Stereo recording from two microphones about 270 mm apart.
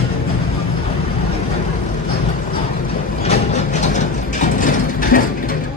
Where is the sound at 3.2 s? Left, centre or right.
Left.